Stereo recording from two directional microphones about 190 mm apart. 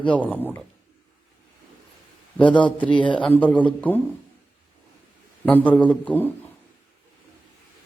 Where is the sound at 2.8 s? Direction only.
25° left (ahead or behind).